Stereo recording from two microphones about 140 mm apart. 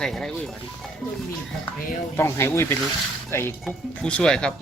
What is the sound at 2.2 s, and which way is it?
Speech, 20° left (ahead or behind).